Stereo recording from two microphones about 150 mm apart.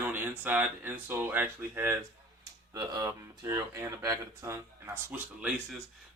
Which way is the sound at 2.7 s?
25° right (ahead or behind).